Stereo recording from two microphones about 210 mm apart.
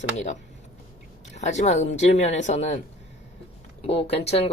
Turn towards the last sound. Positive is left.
turn(degrees=30)  # may be behind; listen again after turning